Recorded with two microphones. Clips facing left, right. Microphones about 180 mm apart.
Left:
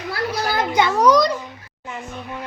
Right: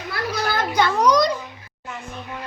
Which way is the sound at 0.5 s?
15° left (ahead or behind).